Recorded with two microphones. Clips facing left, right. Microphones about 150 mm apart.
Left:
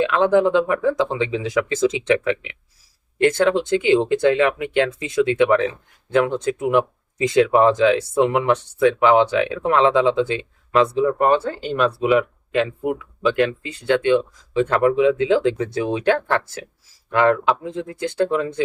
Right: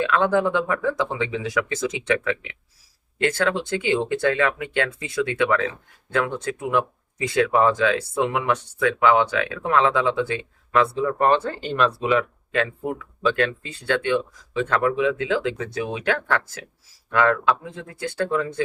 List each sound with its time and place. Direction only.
0.0 s speech: 20° left (ahead or behind)
12.1 s speech: 20° left (ahead or behind)